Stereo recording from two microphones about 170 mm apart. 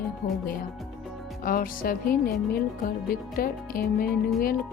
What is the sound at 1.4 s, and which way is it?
Speech, 55° left (ahead or behind).